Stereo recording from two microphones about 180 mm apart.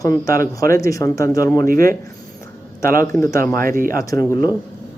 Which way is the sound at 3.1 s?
15° left (ahead or behind).